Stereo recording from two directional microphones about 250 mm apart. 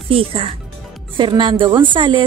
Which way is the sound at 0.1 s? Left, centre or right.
Right.